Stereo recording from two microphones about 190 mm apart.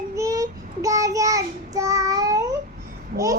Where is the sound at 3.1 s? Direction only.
50° right (ahead or behind).